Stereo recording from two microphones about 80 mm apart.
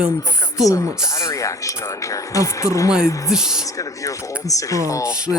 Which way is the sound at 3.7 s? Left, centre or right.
Left.